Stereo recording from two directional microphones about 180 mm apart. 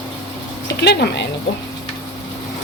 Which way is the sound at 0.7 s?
65° left (ahead or behind).